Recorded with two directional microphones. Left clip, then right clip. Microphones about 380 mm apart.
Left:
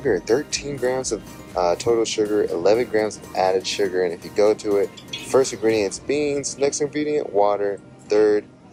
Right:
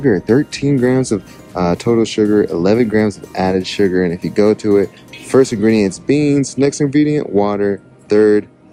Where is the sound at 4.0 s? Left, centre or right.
Right.